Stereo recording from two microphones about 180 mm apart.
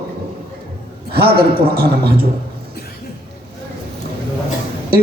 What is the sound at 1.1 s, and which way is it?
Speech, 60° right (ahead or behind).